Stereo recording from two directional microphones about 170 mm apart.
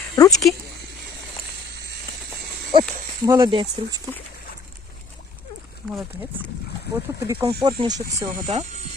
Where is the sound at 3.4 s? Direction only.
25° right (ahead or behind).